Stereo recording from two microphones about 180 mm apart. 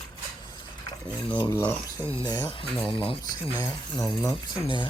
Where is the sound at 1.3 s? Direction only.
20° left (ahead or behind).